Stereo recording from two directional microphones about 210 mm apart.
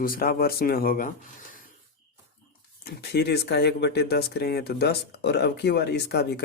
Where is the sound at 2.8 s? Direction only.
50° left (ahead or behind).